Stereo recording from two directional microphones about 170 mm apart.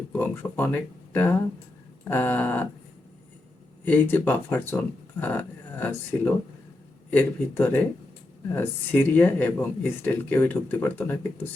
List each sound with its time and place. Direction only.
0.1 s speech: 15° left (ahead or behind)
3.8 s speech: 10° left (ahead or behind)